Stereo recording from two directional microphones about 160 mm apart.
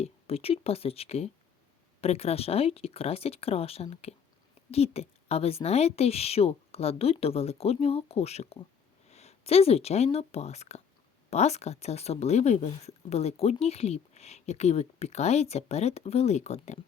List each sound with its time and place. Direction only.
0.0 s a woman's voice: 40° left (ahead or behind)